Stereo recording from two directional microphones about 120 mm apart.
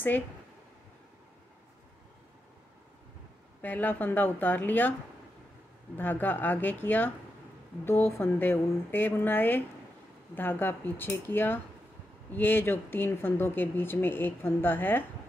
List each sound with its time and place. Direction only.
3.6 s speech: 15° left (ahead or behind)
5.9 s speech: 15° left (ahead or behind)